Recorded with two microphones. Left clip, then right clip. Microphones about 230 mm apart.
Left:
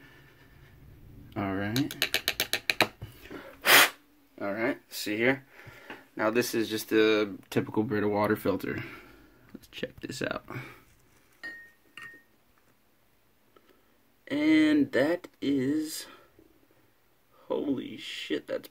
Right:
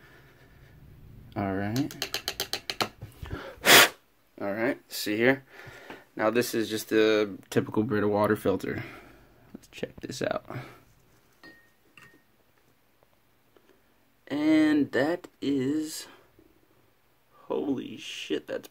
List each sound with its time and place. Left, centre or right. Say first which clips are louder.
1.3 s computer keyboard: right 1 dB; centre
2.0 s a sound: left 3 dB; left
3.3 s sneeze: right 3 dB; right
4.4 s speech: right 1 dB; centre
14.2 s speech: even; centre
17.5 s speech: right 1 dB; centre